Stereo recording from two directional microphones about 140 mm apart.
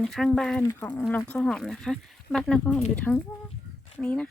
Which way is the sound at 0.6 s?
20° left (ahead or behind).